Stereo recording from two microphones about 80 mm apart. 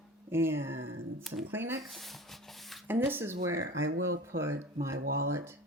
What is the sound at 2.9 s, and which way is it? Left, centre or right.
Speech, right.